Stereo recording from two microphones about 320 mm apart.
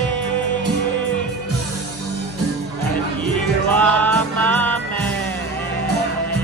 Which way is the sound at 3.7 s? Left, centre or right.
Centre.